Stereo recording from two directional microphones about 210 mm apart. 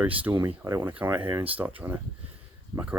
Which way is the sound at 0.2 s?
10° right (ahead or behind).